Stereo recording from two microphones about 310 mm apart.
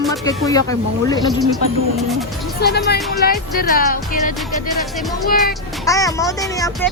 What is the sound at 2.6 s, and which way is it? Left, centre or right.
Speech, left.